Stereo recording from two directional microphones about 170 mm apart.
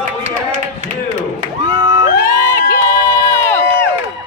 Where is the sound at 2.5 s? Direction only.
15° left (ahead or behind).